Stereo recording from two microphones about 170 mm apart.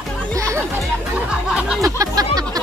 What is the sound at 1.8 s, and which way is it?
Music, 20° right (ahead or behind).